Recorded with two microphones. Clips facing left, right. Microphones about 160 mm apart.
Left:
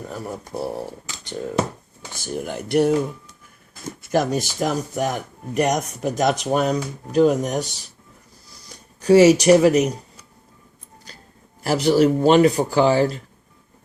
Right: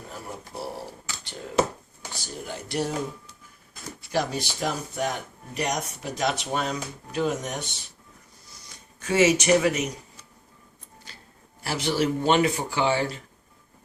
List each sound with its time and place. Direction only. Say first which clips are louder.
2.2 s speech: left 9 dB; 55° left (ahead or behind)
4.0 s speech: left 7 dB; 50° left (ahead or behind)
8.4 s a sound: left 6 dB; 35° left (ahead or behind)
11.6 s speech: left 9 dB; 40° left (ahead or behind)